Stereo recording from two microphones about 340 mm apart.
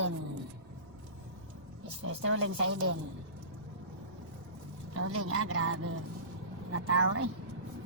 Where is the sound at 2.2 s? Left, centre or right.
Right.